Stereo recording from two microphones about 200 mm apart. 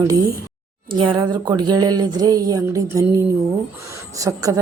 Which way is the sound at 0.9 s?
25° right (ahead or behind).